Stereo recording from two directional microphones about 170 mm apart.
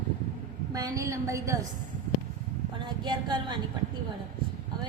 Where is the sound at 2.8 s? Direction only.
25° right (ahead or behind).